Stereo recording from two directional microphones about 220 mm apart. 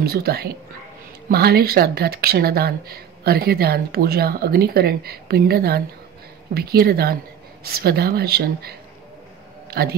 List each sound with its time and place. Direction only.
0.0 s a man's voice: 45° right (ahead or behind)